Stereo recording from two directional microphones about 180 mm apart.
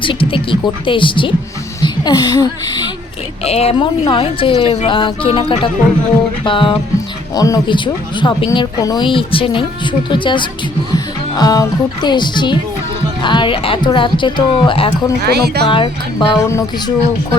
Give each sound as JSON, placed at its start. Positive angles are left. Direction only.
{"t": 0.0, "sound": "a woman's voice", "side_deg": 30}
{"t": 3.4, "sound": "speech", "side_deg": 35}
{"t": 15.2, "sound": "speech", "side_deg": -60}
{"t": 15.6, "sound": "speech", "side_deg": 25}